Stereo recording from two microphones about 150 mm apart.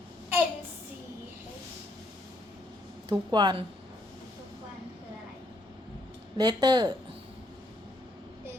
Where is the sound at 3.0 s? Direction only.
30° right (ahead or behind).